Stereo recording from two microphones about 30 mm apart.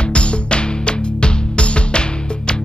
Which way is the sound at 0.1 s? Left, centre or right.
Left.